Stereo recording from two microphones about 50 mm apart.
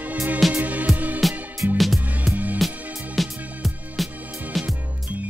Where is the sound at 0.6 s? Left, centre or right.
Right.